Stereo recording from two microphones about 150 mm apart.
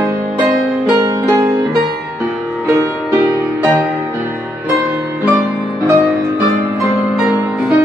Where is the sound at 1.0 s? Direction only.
20° right (ahead or behind).